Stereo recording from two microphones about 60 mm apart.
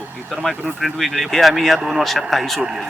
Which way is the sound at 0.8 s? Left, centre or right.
Centre.